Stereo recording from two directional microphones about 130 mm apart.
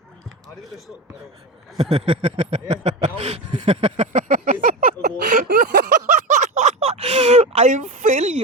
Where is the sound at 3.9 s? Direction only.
80° right.